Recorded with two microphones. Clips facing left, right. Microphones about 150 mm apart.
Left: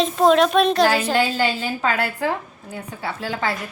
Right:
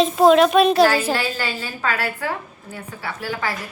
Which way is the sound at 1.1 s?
25° left (ahead or behind).